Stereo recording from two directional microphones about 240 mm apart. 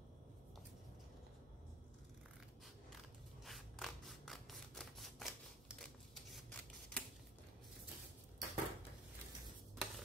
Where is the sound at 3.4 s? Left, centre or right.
Centre.